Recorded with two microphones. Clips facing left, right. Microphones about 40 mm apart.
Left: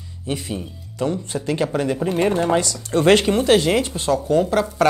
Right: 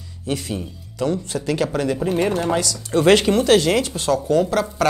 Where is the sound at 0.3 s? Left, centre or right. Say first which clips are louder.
Right 1 dB; centre.